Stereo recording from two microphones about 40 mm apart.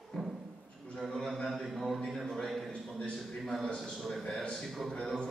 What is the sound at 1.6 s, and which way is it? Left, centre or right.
Mantra, centre.